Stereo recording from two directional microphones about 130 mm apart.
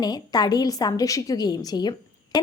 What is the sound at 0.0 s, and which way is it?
A woman's voice, 30° left (ahead or behind).